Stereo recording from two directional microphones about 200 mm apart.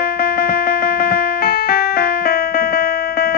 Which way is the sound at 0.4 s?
50° left (ahead or behind).